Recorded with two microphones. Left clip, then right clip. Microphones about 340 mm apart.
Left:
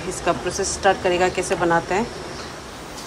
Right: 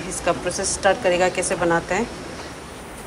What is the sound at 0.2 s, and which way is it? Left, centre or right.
Speech, centre.